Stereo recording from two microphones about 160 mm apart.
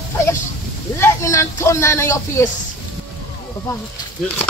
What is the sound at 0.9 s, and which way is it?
A man's voice, 15° left (ahead or behind).